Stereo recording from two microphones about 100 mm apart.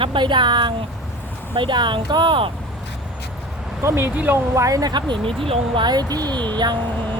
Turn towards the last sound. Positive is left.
turn(degrees=-45)  # may be behind; listen again after turning